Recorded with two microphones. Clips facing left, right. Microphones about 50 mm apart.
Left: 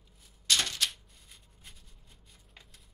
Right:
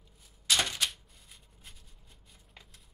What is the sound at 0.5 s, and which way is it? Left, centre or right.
Typewriter, centre.